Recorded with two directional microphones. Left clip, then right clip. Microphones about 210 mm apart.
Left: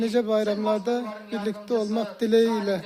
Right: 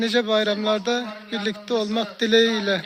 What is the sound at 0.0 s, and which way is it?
Speech, 10° left (ahead or behind).